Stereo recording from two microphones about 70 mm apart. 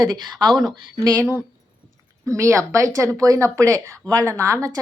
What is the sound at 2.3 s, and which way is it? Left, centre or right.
A woman's voice, right.